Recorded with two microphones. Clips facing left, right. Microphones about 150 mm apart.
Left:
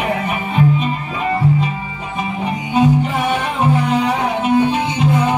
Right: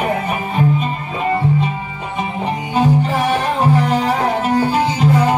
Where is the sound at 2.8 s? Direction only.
35° right (ahead or behind).